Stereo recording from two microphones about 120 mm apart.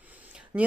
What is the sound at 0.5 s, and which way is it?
Speech, 20° right (ahead or behind).